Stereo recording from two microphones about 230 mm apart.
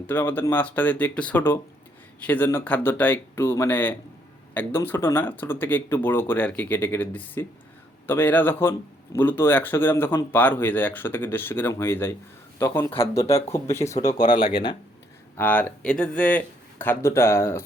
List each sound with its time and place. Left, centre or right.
0.1 s a man's voice: centre
12.9 s speech: left
13.2 s speech: centre
14.1 s speech: left
14.4 s speech: centre
15.4 s speech: centre